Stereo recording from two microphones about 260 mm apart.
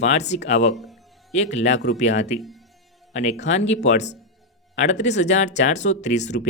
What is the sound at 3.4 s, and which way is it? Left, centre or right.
Speech, left.